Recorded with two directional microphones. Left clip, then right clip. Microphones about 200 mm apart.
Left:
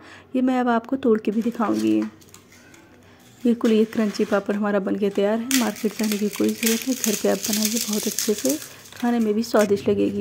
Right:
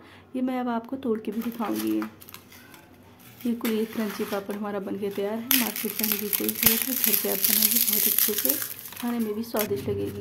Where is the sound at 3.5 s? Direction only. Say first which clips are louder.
Left 8 dB; 25° left (ahead or behind).